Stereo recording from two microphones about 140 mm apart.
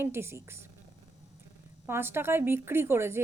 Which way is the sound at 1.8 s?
15° right (ahead or behind).